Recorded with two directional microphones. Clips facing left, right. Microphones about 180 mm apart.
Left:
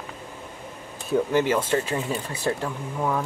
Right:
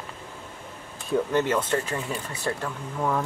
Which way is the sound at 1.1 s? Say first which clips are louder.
Left 2 dB; 10° left (ahead or behind).